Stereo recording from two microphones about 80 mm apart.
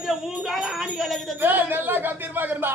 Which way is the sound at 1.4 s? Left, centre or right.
Right.